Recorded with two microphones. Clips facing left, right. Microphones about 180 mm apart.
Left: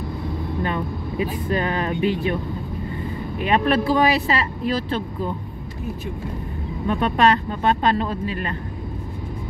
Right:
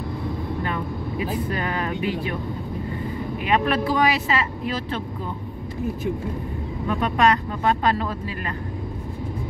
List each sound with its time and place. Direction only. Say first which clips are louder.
0.7 s speech: left 2 dB; 25° left (ahead or behind)
3.4 s speech: left 3 dB; 30° left (ahead or behind)
6.9 s speech: left 2 dB; 30° left (ahead or behind)